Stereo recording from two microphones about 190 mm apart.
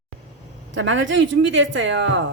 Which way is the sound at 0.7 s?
75° right (ahead or behind).